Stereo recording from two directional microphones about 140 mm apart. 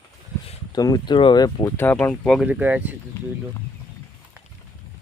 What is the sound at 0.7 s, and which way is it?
Speech, 25° left (ahead or behind).